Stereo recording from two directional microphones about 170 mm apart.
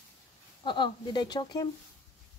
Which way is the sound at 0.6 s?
30° left (ahead or behind).